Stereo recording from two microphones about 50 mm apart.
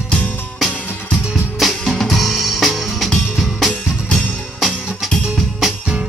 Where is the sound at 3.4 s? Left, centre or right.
Centre.